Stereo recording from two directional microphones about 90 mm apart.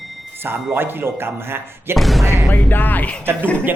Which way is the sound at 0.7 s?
25° right (ahead or behind).